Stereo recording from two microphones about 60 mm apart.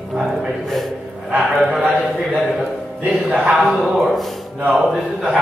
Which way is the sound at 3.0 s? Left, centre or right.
Right.